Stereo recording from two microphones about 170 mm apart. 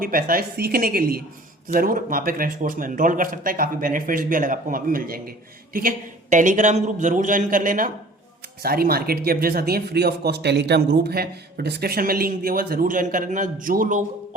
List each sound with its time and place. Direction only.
0.0 s speech: 60° right (ahead or behind)
6.3 s a man's voice: 45° right (ahead or behind)
8.6 s speech: 65° right (ahead or behind)